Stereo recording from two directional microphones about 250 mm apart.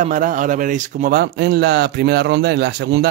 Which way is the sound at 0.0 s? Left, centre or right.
Right.